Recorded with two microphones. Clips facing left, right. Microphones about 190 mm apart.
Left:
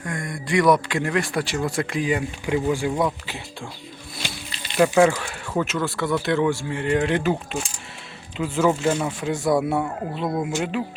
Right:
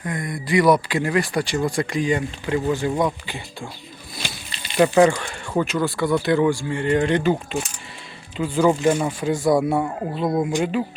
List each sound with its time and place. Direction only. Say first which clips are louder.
0.0 s speech: right 2 dB; centre (ahead or behind)
4.8 s speech: right 2 dB; 5° left (ahead or behind)
8.8 s speech: right 3 dB; 10° right (ahead or behind)
9.3 s speech: right 2 dB; centre (ahead or behind)
10.2 s speech: right 4 dB; 15° right (ahead or behind)
10.6 s speech: right 3 dB; centre (ahead or behind)